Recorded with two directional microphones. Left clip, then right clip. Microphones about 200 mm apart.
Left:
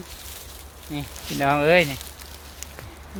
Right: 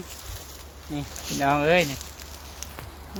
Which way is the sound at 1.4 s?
35° left (ahead or behind).